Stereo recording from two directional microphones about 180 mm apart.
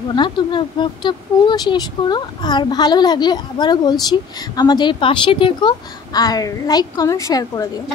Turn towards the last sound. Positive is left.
turn(degrees=20)  # may be behind; listen again after turning